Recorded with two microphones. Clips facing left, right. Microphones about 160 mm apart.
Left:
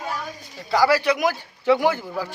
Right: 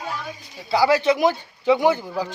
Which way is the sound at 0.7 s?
15° right (ahead or behind).